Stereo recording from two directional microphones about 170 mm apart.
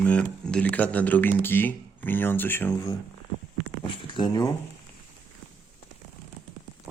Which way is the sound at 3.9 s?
25° left (ahead or behind).